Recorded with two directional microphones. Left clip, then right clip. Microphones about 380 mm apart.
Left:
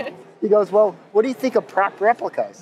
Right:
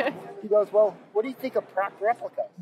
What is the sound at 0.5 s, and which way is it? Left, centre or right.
Speech, left.